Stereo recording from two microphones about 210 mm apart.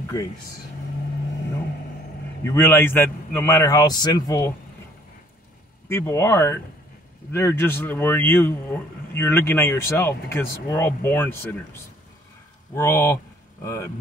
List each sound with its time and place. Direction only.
0.1 s speech: 15° left (ahead or behind)
2.4 s speech: 10° left (ahead or behind)
5.9 s speech: 10° left (ahead or behind)
12.7 s speech: 10° left (ahead or behind)